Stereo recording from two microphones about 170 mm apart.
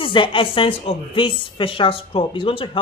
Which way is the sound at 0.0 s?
30° left (ahead or behind).